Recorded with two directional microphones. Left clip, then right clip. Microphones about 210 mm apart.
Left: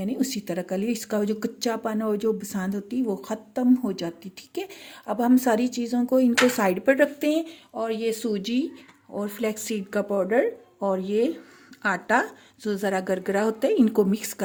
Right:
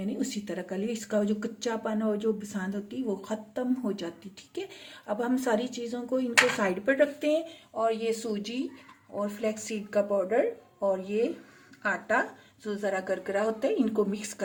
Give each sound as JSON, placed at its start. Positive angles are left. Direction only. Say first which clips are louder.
{"t": 0.0, "sound": "speech", "louder": "left 5 dB", "side_deg": 45}